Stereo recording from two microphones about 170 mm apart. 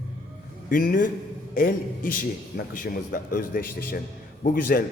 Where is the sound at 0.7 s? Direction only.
55° left (ahead or behind).